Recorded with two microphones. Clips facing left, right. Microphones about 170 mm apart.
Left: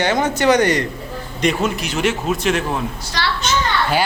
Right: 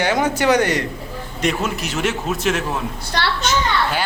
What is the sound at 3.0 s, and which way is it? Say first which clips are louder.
Speech: right 1 dB; 55° right (ahead or behind).